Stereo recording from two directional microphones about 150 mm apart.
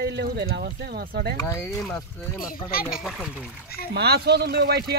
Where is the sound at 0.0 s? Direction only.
90° right.